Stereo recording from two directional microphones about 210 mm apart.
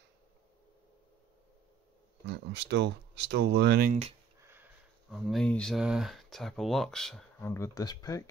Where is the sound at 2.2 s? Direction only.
55° right (ahead or behind).